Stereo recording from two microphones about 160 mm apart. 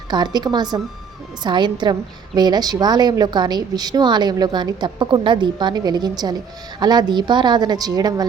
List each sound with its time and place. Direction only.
0.1 s a woman's voice: 25° right (ahead or behind)